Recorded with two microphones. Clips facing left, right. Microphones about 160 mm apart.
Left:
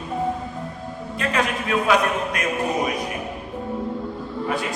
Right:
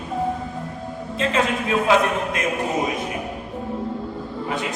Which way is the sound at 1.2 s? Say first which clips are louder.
Right 2 dB; 25° right (ahead or behind).